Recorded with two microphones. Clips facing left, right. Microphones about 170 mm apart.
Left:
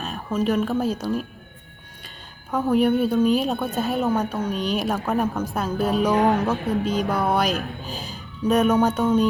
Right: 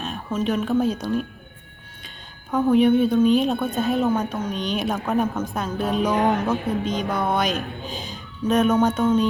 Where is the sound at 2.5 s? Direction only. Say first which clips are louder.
Right 3 dB; centre (ahead or behind).